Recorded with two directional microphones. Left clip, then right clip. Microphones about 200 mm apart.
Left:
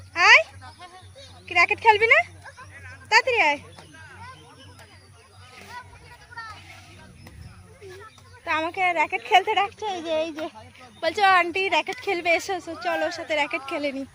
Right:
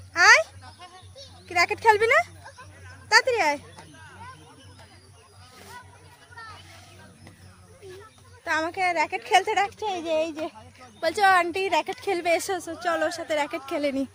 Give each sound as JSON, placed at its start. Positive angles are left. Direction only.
{"t": 0.1, "sound": "a sound", "side_deg": -10}
{"t": 1.5, "sound": "speech", "side_deg": -10}
{"t": 6.4, "sound": "children playing", "side_deg": 35}
{"t": 8.4, "sound": "a woman's voice", "side_deg": 0}
{"t": 9.6, "sound": "speech", "side_deg": -5}